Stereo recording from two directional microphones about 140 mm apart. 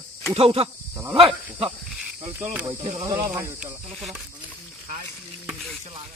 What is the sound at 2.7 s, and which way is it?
Speech, 45° right (ahead or behind).